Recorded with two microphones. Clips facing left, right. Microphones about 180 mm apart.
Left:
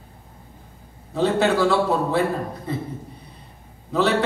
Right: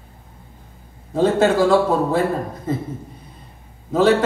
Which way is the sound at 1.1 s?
45° right (ahead or behind).